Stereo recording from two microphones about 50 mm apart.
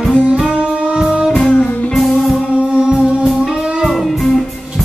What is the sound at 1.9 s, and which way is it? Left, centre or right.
Music, centre.